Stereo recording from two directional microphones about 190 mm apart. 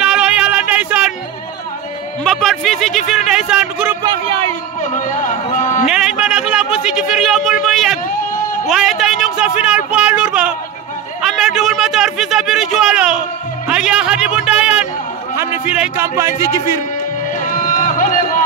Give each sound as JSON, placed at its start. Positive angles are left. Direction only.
{"t": 0.0, "sound": "music", "side_deg": -5}
{"t": 2.2, "sound": "music", "side_deg": 5}
{"t": 3.1, "sound": "speech", "side_deg": -5}
{"t": 4.0, "sound": "speech", "side_deg": -20}
{"t": 4.8, "sound": "a sound", "side_deg": 40}
{"t": 5.9, "sound": "a sound", "side_deg": -5}
{"t": 8.6, "sound": "speech", "side_deg": 0}
{"t": 11.2, "sound": "a sound", "side_deg": 0}
{"t": 13.7, "sound": "music", "side_deg": -5}
{"t": 15.3, "sound": "a man's voice", "side_deg": -10}
{"t": 17.4, "sound": "run", "side_deg": 45}